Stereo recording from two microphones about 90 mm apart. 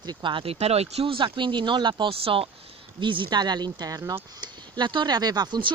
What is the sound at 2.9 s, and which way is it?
Speech, 65° right (ahead or behind).